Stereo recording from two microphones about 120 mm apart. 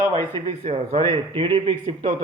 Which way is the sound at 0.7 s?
60° right (ahead or behind).